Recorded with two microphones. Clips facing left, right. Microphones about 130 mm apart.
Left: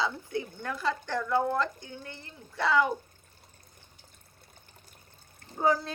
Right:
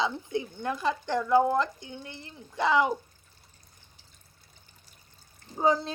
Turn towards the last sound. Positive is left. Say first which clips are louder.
# right 1 dB
turn(degrees=-20)  # may be behind; listen again after turning